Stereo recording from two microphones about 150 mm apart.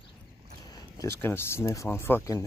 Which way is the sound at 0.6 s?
25° left (ahead or behind).